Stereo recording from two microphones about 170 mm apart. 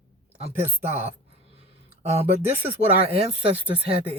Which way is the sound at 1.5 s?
35° right (ahead or behind).